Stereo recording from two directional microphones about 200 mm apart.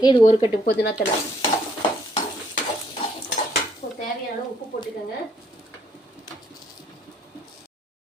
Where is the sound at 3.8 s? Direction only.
40° left (ahead or behind).